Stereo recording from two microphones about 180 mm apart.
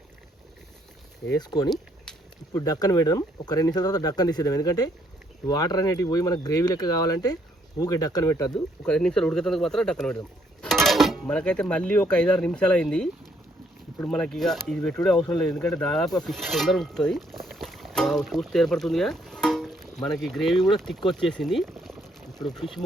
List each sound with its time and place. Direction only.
1.3 s speech: 20° left (ahead or behind)
8.8 s speech: 5° left (ahead or behind)
17.4 s boat: centre (ahead or behind)
20.1 s speech: centre (ahead or behind)